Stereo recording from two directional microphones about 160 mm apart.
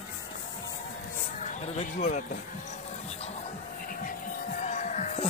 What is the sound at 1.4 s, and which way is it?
Speech, 50° left (ahead or behind).